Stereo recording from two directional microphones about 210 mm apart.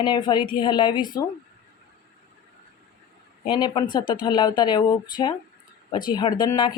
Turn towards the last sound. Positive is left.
turn(degrees=20)  # may be behind; listen again after turning